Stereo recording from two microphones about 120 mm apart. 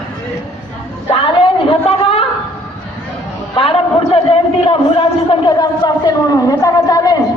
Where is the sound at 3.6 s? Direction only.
50° left (ahead or behind); by 7.2 s 30° left (ahead or behind).